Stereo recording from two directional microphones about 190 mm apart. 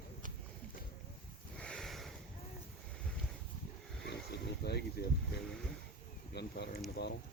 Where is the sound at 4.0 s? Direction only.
60° left (ahead or behind).